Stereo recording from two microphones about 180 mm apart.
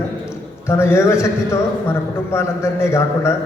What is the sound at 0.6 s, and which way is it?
A man's voice, 15° left (ahead or behind).